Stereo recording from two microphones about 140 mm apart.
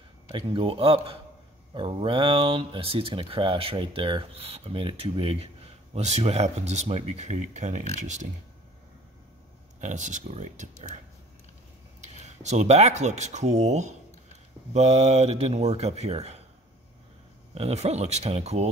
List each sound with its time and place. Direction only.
0.3 s speech: 40° right (ahead or behind); by 8.3 s 60° right (ahead or behind)
9.8 s speech: 60° right (ahead or behind)
12.0 s speech: 55° right (ahead or behind)
17.6 s speech: 50° right (ahead or behind)